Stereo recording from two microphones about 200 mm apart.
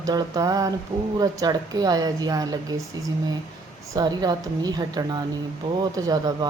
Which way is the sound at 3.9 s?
20° right (ahead or behind).